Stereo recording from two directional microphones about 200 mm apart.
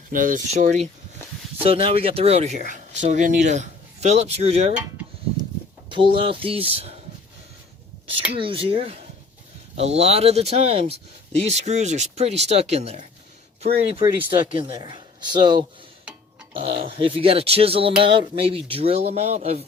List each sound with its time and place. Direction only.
0.1 s speech: 40° right (ahead or behind)
4.8 s a sound: 10° right (ahead or behind)
6.1 s speech: 25° right (ahead or behind)
8.4 s speech: 25° right (ahead or behind)